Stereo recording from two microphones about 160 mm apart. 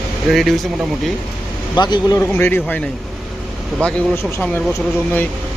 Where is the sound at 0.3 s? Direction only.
Centre (ahead or behind).